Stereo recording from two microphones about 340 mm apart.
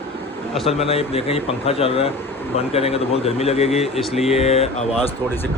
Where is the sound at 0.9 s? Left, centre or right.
Centre.